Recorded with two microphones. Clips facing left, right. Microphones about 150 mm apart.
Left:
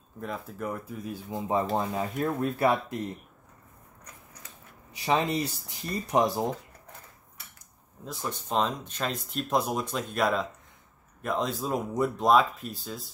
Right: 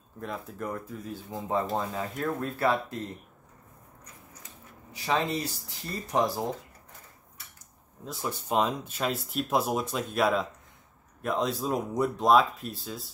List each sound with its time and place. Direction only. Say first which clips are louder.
0.2 s speech: left 1 dB; centre (ahead or behind)
4.9 s speech: left 2 dB; 20° left (ahead or behind)
8.0 s speech: right 1 dB; centre (ahead or behind)